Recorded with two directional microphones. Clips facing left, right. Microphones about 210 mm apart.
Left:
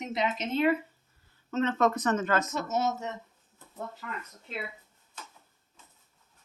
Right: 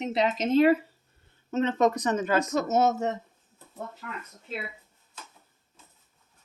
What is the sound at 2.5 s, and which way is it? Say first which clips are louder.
Speech: right 6 dB; 50° right (ahead or behind).